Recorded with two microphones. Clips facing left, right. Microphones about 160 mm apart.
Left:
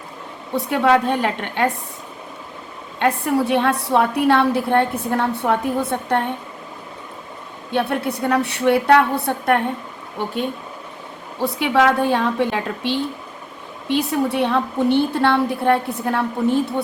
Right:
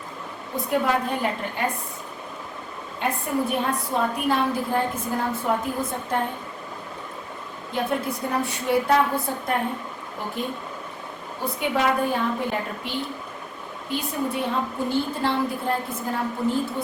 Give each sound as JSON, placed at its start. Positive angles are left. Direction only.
{"t": 0.5, "sound": "a woman's voice", "side_deg": 75}
{"t": 3.0, "sound": "a woman's voice", "side_deg": 80}
{"t": 7.7, "sound": "a woman's voice", "side_deg": 70}
{"t": 11.3, "sound": "a woman's voice", "side_deg": 85}